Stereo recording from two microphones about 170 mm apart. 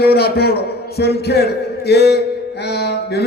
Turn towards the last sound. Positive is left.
turn(degrees=75)  # may be behind; listen again after turning